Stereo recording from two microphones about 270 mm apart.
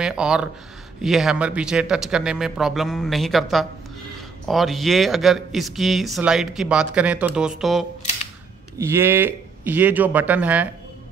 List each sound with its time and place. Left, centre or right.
0.0 s a man's voice: centre